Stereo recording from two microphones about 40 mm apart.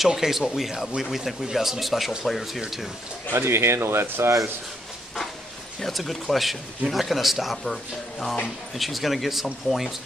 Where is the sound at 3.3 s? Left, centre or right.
Right.